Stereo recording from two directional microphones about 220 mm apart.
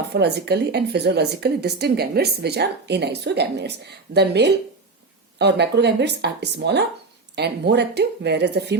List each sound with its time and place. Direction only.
0.1 s a woman's voice: 50° right (ahead or behind)